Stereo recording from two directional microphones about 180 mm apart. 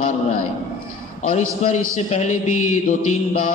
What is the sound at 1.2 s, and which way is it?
A man's voice, 40° left (ahead or behind).